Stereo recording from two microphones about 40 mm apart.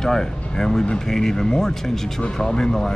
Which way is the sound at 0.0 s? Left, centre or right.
Centre.